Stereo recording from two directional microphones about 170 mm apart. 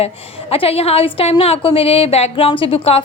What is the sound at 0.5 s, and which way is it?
A woman's voice, 35° left (ahead or behind).